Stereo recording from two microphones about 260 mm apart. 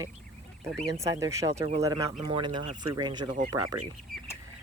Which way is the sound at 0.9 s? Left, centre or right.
Centre.